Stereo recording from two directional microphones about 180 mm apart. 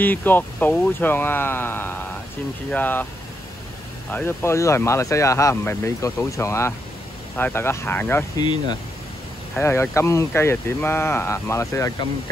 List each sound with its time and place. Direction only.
0.0 s speech: 10° left (ahead or behind)
4.1 s speech: 10° left (ahead or behind)
9.6 s speech: 15° left (ahead or behind)